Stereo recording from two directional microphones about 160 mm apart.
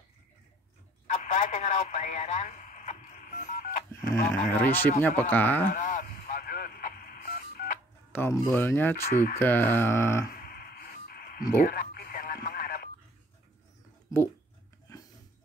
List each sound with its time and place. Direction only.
1.1 s radio: 50° left (ahead or behind)
4.1 s speech: 15° left (ahead or behind)
5.7 s telephone dialing: 55° left (ahead or behind)
8.1 s speech: 15° left (ahead or behind)
10.3 s a sound: 70° left (ahead or behind)
11.6 s radio: 70° left (ahead or behind)
14.1 s speech: 20° left (ahead or behind)
14.9 s a sound: 20° left (ahead or behind)